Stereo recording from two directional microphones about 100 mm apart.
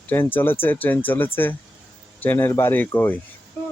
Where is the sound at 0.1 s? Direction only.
20° left (ahead or behind).